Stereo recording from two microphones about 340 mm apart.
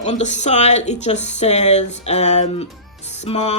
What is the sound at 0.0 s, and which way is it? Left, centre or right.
Speech, centre.